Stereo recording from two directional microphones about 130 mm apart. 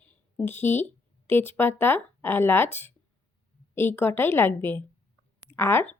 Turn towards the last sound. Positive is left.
turn(degrees=20)  # may be behind; listen again after turning